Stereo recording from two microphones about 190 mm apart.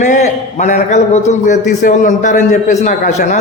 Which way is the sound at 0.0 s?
40° left (ahead or behind).